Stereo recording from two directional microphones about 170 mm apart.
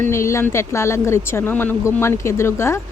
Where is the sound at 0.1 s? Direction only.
15° left (ahead or behind).